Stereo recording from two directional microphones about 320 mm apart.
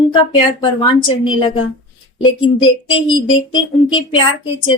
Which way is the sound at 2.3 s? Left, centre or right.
Centre.